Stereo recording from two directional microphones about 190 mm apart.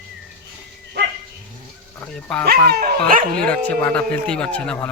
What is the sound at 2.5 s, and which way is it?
Speech, 55° right (ahead or behind).